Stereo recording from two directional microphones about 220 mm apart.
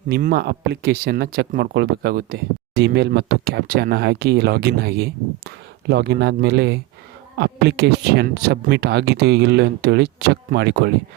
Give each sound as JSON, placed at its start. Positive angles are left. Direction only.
{"t": 0.1, "sound": "speech", "side_deg": -40}